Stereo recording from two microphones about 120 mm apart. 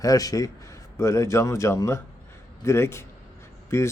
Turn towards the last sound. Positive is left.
turn(degrees=25)  # may be behind; listen again after turning